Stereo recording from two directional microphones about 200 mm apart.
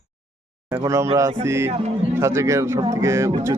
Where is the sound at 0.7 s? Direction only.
15° right (ahead or behind).